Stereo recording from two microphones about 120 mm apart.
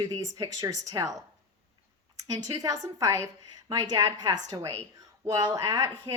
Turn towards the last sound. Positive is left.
turn(degrees=-25)  # may be behind; listen again after turning